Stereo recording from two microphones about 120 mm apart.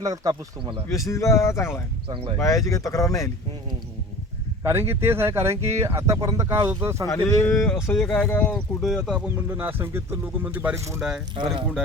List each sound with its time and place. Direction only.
0.0 s speech: 30° right (ahead or behind)
0.9 s speech: 25° left (ahead or behind)
2.0 s speech: 45° right (ahead or behind)
2.4 s speech: 25° left (ahead or behind)
4.6 s speech: 20° right (ahead or behind)
7.1 s speech: 25° left (ahead or behind)
7.5 s speech: 5° left (ahead or behind)
9.0 s speech: 10° right (ahead or behind)
11.3 s speech: 45° right (ahead or behind)